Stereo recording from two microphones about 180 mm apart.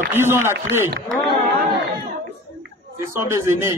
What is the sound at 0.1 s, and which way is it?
Speech, 15° right (ahead or behind).